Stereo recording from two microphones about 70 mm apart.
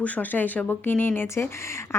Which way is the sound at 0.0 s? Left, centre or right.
Left.